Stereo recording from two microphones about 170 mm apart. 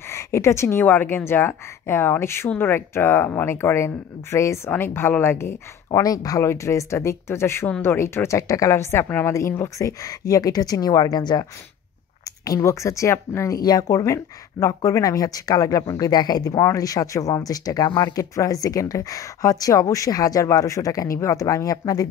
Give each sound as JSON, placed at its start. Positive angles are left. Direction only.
{"t": 0.1, "sound": "speech", "side_deg": 15}
{"t": 12.4, "sound": "speech", "side_deg": 20}